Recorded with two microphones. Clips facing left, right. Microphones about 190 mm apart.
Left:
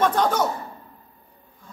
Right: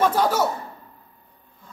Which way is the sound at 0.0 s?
5° right (ahead or behind).